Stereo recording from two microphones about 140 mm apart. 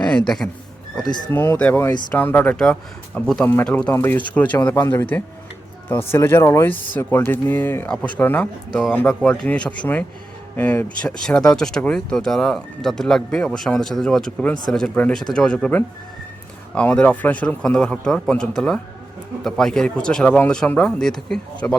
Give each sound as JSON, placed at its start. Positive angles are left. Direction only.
{"t": 0.0, "sound": "speech", "side_deg": 5}
{"t": 1.3, "sound": "speech", "side_deg": 15}